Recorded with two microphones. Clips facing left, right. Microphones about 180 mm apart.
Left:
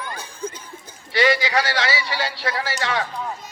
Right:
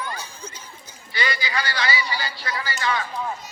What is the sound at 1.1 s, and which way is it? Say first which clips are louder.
A man's voice: left 8 dB; 90° left.